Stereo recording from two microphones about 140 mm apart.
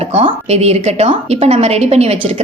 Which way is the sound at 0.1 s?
45° right (ahead or behind).